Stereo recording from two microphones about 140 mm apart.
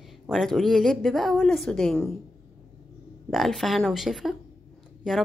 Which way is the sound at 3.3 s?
Centre (ahead or behind).